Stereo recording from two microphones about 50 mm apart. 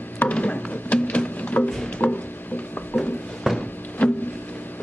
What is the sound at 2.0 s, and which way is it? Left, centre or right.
Speech, left.